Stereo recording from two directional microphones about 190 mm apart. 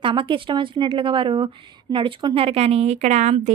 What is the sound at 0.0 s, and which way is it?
Speech, 25° right (ahead or behind).